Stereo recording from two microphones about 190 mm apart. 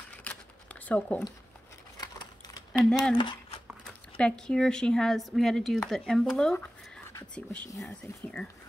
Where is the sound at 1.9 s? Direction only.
20° left (ahead or behind).